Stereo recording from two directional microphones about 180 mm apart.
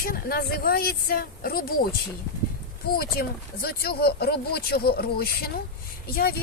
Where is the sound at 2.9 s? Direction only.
55° left (ahead or behind).